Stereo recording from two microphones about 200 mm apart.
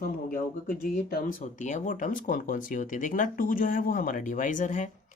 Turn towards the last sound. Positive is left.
turn(degrees=40)  # may be behind; listen again after turning